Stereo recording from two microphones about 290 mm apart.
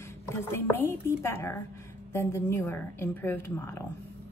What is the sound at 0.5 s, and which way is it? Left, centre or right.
A woman's voice, centre.